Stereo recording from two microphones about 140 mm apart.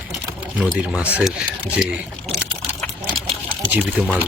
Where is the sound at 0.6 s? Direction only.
5° right (ahead or behind).